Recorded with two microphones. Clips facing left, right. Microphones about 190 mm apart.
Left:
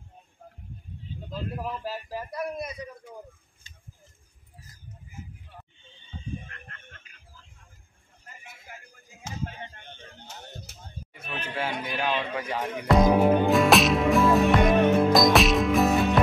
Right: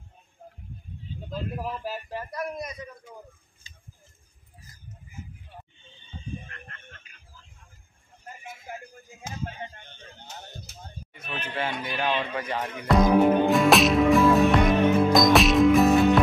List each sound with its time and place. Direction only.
1.6 s speech: 5° right (ahead or behind)
2.0 s a man's voice: 10° left (ahead or behind)
3.6 s a sound: 60° left (ahead or behind)
11.1 s speech: 10° left (ahead or behind)